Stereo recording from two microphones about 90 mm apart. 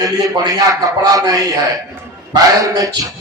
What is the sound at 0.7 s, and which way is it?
A man's voice, 40° right (ahead or behind).